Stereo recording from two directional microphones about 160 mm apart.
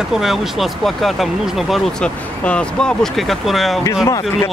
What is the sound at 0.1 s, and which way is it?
Speech, centre (ahead or behind).